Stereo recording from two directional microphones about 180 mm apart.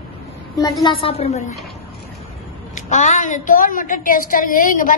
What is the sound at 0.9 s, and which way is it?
Speech, 35° left (ahead or behind).